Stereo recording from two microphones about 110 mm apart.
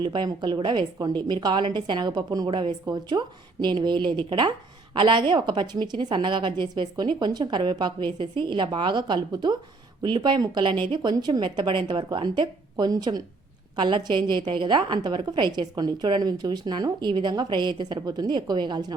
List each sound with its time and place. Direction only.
0.0 s a woman's voice: 45° right (ahead or behind)